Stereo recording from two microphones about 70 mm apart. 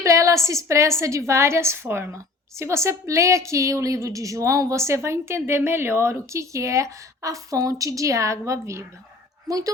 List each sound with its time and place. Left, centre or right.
0.0 s a woman's voice: right
9.5 s a woman's voice: right